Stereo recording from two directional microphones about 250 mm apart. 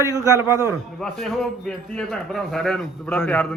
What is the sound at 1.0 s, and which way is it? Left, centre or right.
A man's voice, centre.